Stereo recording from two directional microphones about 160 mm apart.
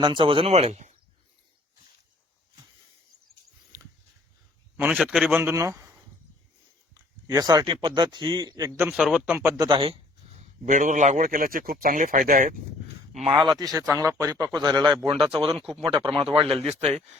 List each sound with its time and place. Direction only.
0.0 s a man's voice: 30° right (ahead or behind)
3.7 s dog: 20° right (ahead or behind)
4.8 s a man's voice: 5° right (ahead or behind)
7.3 s a man's voice: 25° right (ahead or behind); by 9.6 s 5° right (ahead or behind)
9.6 s a man's voice: 30° right (ahead or behind)
10.7 s a man's voice: 50° right (ahead or behind)
13.4 s a man's voice: 30° right (ahead or behind)